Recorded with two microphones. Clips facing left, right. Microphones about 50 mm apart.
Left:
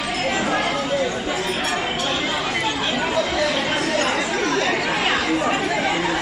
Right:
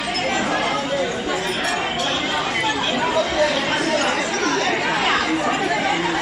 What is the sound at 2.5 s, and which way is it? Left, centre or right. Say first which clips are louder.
Chatter: right 1 dB; centre.